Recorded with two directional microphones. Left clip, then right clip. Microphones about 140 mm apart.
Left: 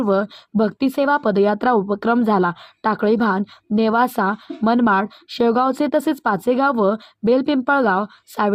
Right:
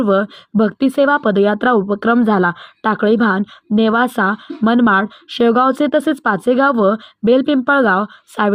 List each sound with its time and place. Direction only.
0.0 s speech: 15° right (ahead or behind)